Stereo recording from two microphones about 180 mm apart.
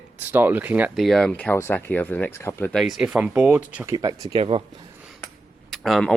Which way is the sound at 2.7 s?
Centre (ahead or behind).